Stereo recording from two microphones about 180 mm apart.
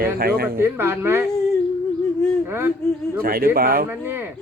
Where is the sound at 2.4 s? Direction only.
10° right (ahead or behind).